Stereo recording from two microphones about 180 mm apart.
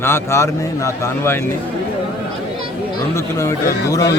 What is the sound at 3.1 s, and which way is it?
Speech, 15° left (ahead or behind).